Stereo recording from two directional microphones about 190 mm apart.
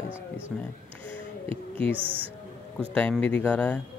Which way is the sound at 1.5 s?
30° right (ahead or behind).